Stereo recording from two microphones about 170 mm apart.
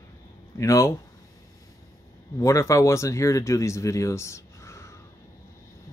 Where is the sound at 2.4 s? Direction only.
20° left (ahead or behind).